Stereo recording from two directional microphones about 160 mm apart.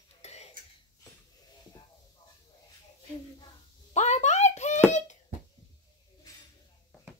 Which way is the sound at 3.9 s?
45° left (ahead or behind).